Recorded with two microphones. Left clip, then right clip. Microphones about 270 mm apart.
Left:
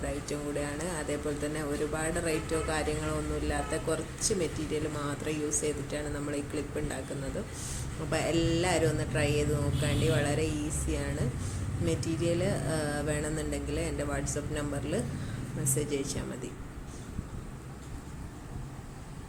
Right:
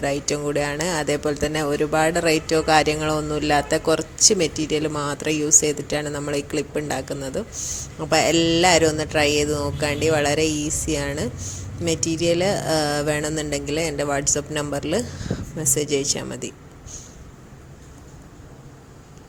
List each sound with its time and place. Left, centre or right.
0.0 s speech: right
8.1 s speech: right